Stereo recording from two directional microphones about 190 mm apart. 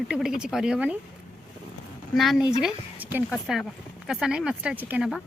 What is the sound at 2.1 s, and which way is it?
A woman's voice, centre (ahead or behind).